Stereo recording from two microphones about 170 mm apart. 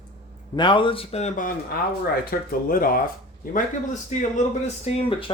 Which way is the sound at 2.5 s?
60° left (ahead or behind).